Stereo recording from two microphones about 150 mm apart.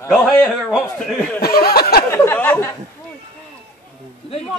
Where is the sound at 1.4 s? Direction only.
90° left.